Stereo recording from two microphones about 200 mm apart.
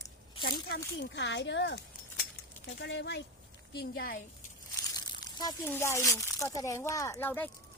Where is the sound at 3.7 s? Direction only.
50° left (ahead or behind).